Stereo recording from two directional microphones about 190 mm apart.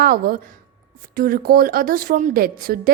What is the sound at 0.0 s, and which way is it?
A woman's voice, 50° right (ahead or behind).